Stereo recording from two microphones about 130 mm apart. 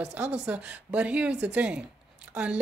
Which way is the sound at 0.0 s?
10° right (ahead or behind).